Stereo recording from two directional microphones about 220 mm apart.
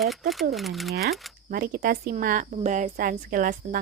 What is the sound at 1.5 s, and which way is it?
Speech, 40° right (ahead or behind).